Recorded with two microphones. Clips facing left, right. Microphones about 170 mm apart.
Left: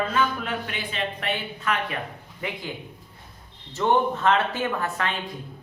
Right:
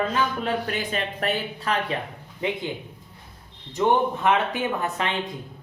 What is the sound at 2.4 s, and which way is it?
Speech, 20° right (ahead or behind).